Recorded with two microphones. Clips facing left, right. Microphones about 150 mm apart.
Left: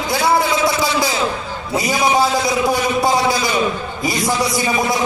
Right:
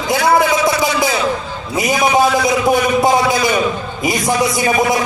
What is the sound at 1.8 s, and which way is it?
A man's voice, 20° right (ahead or behind).